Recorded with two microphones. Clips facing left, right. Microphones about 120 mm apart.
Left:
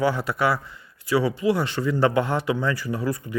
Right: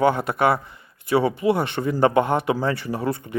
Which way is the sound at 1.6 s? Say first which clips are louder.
Right 1 dB; 55° right (ahead or behind).